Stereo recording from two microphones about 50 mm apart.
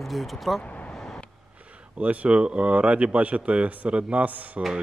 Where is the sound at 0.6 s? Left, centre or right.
Left.